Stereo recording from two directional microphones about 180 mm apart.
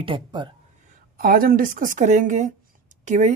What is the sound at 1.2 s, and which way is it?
A woman's voice, 50° right (ahead or behind).